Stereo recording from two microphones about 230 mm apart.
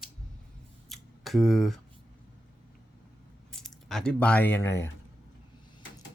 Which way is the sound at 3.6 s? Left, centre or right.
Centre.